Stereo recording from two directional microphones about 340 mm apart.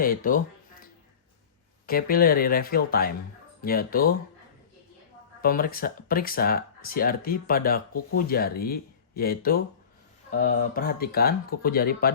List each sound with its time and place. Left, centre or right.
0.0 s a sound: left
1.9 s speech: left
5.4 s speech: left